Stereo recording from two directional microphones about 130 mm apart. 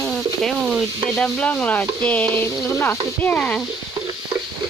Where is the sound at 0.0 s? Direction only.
Centre (ahead or behind).